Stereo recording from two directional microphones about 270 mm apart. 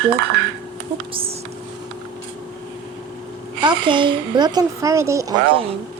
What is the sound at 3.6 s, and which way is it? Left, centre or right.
A woman's voice, centre.